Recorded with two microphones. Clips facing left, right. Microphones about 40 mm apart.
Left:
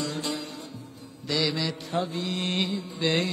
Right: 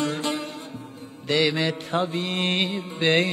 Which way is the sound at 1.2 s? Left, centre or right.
Right.